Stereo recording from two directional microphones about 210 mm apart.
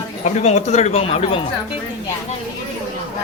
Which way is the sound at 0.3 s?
35° left (ahead or behind).